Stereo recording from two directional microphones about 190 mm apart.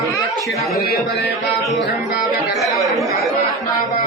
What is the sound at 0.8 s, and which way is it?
Speech, 60° left (ahead or behind).